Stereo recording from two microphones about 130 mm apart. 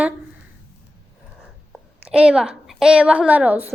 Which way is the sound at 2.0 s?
10° right (ahead or behind).